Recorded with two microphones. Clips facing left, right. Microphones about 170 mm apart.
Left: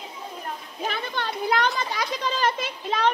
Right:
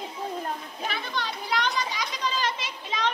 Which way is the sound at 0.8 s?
50° left (ahead or behind).